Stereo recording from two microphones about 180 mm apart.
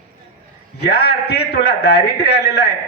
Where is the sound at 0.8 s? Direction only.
65° left (ahead or behind).